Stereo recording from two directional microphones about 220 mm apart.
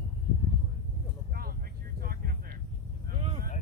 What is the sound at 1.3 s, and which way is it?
Vehicle, 45° right (ahead or behind).